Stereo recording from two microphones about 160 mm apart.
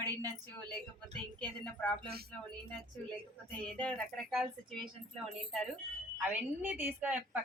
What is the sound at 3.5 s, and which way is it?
Speech, 10° left (ahead or behind).